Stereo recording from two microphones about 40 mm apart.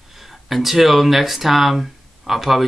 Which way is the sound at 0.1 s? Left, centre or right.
Centre.